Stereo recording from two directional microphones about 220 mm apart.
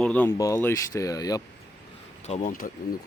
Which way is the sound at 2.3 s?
35° left (ahead or behind).